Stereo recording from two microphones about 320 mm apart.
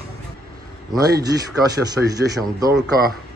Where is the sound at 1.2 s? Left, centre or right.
Centre.